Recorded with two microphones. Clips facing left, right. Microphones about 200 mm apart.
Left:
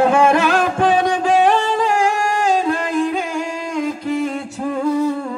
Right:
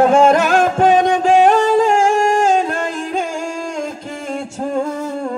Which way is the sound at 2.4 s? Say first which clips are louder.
Right 2 dB; 45° right (ahead or behind).